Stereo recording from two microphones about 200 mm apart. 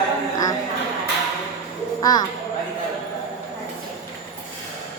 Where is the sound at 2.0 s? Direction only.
20° left (ahead or behind).